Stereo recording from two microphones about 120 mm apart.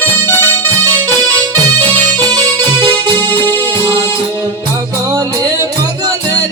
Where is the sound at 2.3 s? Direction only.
35° right (ahead or behind).